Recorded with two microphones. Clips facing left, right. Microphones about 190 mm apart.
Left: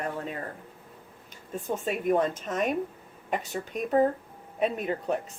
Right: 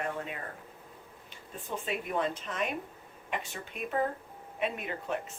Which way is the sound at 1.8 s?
45° left (ahead or behind).